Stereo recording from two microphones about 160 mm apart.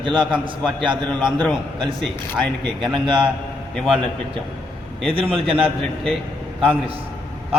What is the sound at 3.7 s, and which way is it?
Speech, 5° left (ahead or behind).